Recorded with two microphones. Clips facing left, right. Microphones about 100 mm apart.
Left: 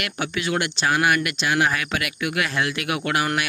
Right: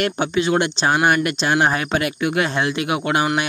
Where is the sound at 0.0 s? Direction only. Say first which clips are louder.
Right 7 dB; 25° right (ahead or behind).